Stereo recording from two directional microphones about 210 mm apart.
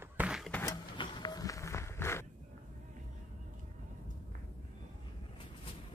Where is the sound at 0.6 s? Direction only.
20° left (ahead or behind).